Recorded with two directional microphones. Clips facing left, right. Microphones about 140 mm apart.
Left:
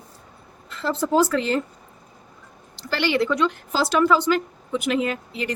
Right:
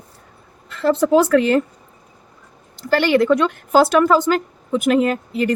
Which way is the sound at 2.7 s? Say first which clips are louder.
Right 7 dB; 50° right (ahead or behind).